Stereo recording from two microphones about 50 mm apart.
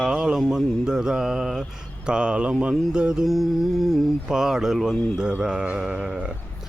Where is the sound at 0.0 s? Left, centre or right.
Centre.